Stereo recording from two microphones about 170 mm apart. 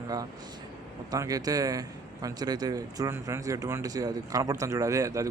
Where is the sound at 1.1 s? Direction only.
20° right (ahead or behind).